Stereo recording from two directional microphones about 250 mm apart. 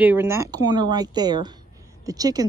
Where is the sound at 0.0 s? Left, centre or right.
Centre.